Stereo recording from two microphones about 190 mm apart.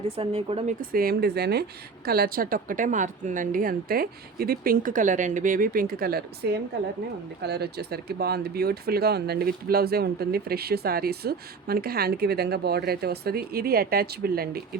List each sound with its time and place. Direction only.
0.2 s speech: 30° right (ahead or behind)
0.8 s speech: 50° right (ahead or behind)